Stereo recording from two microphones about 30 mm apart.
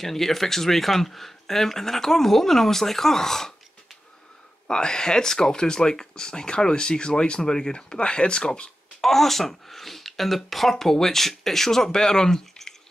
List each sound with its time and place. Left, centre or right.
0.0 s speech: centre
4.6 s speech: left
9.0 s speech: centre